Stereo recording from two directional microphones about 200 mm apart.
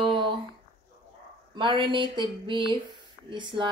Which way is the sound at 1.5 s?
25° right (ahead or behind).